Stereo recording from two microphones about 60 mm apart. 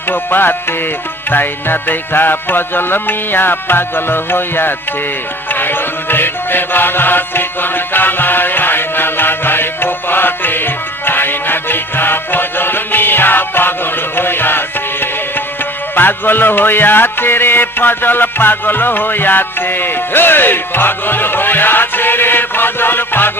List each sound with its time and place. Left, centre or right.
0.1 s music: left
16.0 s music: left